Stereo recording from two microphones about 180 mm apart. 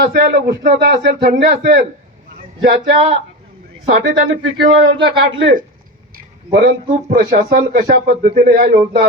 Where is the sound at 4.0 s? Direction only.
90° right.